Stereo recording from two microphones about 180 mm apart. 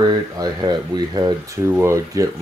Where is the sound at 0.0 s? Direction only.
25° right (ahead or behind).